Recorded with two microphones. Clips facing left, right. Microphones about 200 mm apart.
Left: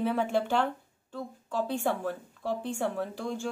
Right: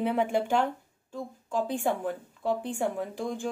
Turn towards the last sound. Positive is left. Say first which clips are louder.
# right 1 dB
turn(degrees=-15)  # may be behind; listen again after turning